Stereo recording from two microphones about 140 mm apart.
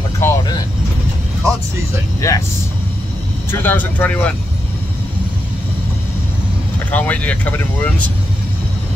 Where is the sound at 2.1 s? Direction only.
20° left (ahead or behind).